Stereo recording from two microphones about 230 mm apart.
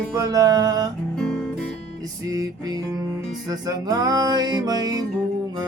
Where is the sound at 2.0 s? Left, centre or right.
Centre.